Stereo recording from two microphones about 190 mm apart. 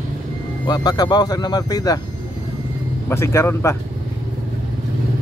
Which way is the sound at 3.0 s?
15° left (ahead or behind).